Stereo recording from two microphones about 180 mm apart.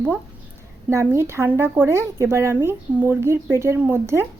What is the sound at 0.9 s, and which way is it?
Speech, 15° right (ahead or behind).